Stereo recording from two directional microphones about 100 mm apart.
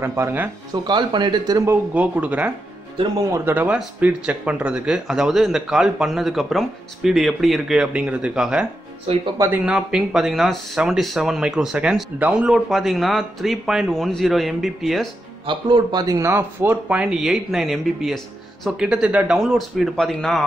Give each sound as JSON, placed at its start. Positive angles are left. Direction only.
{"t": 0.0, "sound": "speech", "side_deg": -25}
{"t": 0.8, "sound": "speech", "side_deg": -50}
{"t": 1.7, "sound": "speech", "side_deg": -15}
{"t": 3.6, "sound": "speech", "side_deg": -10}
{"t": 15.4, "sound": "speech", "side_deg": -45}
{"t": 16.2, "sound": "speech", "side_deg": -25}
{"t": 16.9, "sound": "speech", "side_deg": -10}